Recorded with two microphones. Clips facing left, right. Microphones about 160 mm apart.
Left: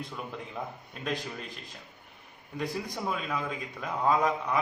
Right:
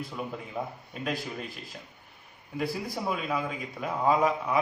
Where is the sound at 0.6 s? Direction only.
10° right (ahead or behind).